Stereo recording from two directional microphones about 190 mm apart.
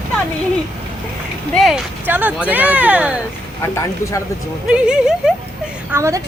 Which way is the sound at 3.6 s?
15° left (ahead or behind).